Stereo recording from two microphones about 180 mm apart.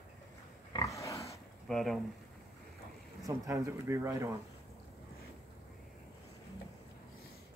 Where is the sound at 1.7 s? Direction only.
Centre (ahead or behind).